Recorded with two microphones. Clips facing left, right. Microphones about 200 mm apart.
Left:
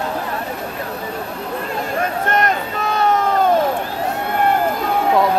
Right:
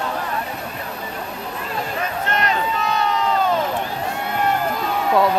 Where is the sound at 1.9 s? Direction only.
50° left (ahead or behind).